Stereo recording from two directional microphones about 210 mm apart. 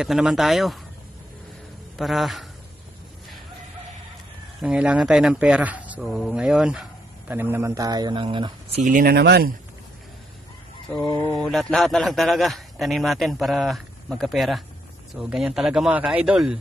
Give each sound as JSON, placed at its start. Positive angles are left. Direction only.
{"t": 0.0, "sound": "speech", "side_deg": 0}
{"t": 2.0, "sound": "speech", "side_deg": 0}
{"t": 4.6, "sound": "speech", "side_deg": -5}
{"t": 8.8, "sound": "speech", "side_deg": -45}
{"t": 11.3, "sound": "speech", "side_deg": 0}